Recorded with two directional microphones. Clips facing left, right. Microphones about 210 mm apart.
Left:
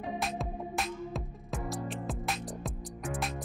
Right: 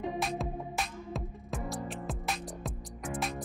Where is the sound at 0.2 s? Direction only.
Centre (ahead or behind).